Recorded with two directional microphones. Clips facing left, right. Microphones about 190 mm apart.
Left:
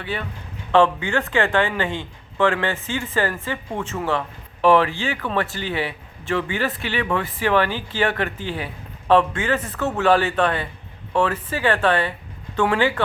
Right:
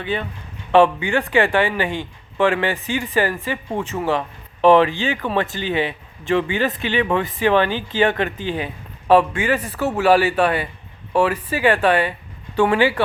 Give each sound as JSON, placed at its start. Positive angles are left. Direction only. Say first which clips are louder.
{"t": 0.0, "sound": "a man's voice", "louder": "right 4 dB", "side_deg": -20}